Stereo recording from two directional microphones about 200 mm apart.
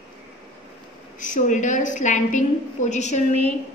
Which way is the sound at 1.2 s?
40° left (ahead or behind).